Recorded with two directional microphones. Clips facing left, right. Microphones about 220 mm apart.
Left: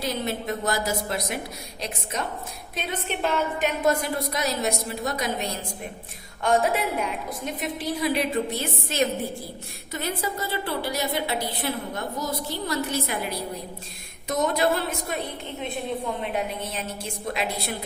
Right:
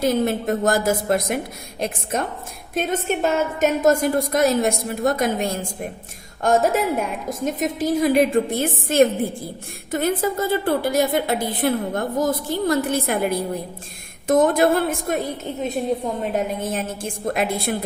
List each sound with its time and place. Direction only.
0.0 s a woman's voice: 50° right (ahead or behind)